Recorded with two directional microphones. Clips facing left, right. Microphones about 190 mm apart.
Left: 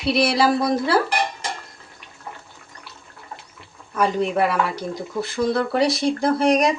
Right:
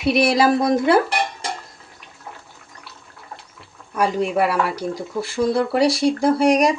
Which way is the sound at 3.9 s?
10° right (ahead or behind).